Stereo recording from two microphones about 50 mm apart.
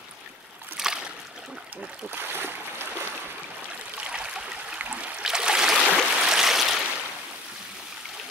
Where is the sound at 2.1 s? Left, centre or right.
Right.